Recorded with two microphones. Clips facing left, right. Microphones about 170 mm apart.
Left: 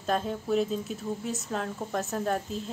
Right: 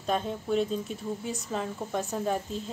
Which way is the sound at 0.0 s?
Centre (ahead or behind).